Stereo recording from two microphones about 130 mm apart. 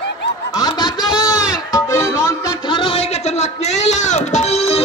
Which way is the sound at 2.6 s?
40° left (ahead or behind).